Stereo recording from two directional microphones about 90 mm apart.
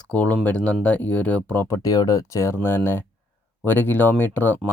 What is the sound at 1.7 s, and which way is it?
Speech, 40° left (ahead or behind).